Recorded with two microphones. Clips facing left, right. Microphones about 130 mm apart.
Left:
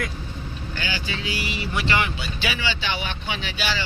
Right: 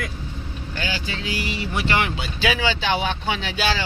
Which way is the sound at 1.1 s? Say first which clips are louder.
Right 1 dB; 45° right (ahead or behind).